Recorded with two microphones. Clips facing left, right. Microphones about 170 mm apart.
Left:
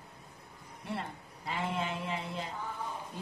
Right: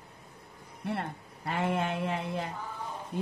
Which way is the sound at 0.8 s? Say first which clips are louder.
Right 5 dB; 60° right (ahead or behind).